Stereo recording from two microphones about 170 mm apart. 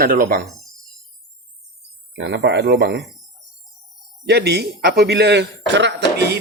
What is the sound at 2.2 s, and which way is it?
Speech, 90° right.